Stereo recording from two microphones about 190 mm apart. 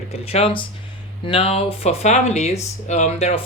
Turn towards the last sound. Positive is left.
turn(degrees=35)  # may be behind; listen again after turning